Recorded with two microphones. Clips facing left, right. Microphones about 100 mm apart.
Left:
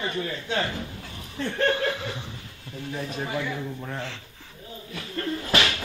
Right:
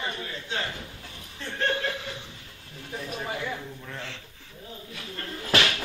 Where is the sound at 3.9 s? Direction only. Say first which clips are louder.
Left 5 dB; 35° left (ahead or behind).